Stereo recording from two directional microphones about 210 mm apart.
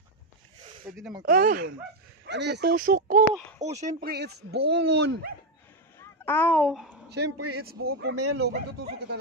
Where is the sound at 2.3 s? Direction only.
55° right (ahead or behind).